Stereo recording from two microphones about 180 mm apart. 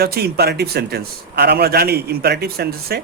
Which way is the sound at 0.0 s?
60° right (ahead or behind).